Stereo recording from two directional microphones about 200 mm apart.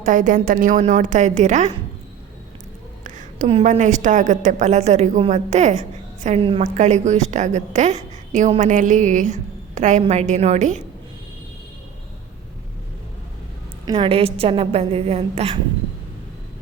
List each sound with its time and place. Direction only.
0.0 s a woman's voice: 40° right (ahead or behind)
3.0 s a woman's voice: 40° right (ahead or behind)
13.8 s a woman's voice: 25° right (ahead or behind)